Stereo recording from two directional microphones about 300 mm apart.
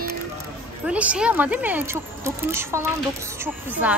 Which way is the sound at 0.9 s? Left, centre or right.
Centre.